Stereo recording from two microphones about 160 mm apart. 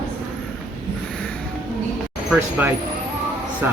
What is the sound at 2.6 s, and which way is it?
Speech, 10° right (ahead or behind).